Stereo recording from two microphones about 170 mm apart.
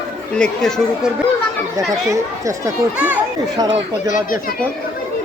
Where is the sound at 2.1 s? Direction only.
20° right (ahead or behind).